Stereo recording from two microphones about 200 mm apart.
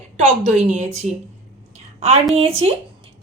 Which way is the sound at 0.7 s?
35° right (ahead or behind).